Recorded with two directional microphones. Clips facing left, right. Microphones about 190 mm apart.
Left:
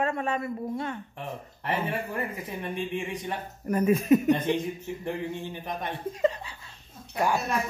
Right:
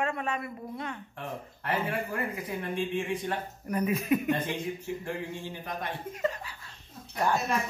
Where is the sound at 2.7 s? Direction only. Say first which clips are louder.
Right 2 dB; 15° left (ahead or behind).